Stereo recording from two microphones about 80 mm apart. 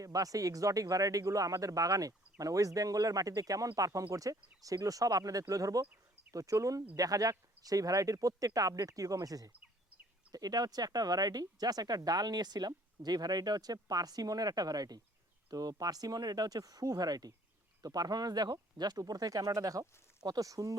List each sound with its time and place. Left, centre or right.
0.0 s speech: right